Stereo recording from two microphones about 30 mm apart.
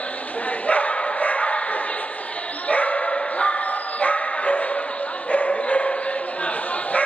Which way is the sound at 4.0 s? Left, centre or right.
Left.